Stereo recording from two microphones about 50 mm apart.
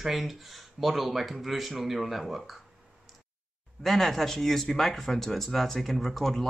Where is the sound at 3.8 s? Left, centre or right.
Centre.